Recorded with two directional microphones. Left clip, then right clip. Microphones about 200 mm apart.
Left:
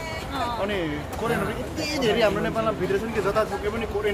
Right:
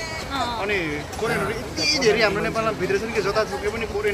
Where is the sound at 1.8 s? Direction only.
10° left (ahead or behind).